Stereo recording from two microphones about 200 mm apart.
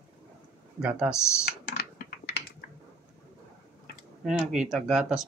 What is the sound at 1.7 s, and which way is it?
Typing, 55° left (ahead or behind).